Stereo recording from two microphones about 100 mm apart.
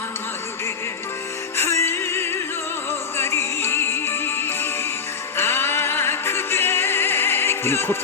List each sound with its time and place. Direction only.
1.5 s music: 25° left (ahead or behind)